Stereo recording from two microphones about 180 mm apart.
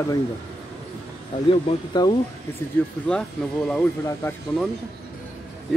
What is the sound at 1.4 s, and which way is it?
Speech, 25° left (ahead or behind).